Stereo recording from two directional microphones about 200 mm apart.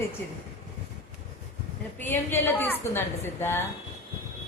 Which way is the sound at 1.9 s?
10° left (ahead or behind).